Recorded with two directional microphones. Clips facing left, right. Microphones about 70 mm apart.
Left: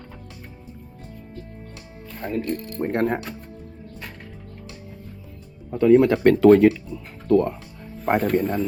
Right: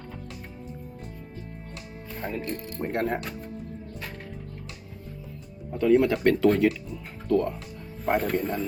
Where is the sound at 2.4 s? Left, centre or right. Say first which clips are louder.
Left 6 dB; centre.